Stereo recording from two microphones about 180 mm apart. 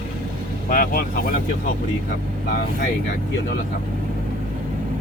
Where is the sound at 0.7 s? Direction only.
50° left (ahead or behind).